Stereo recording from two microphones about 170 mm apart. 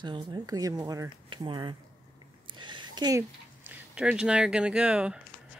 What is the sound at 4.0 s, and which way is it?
Speech, 5° right (ahead or behind).